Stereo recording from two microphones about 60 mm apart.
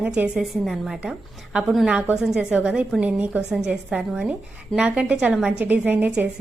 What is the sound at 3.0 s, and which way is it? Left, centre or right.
Speech, right.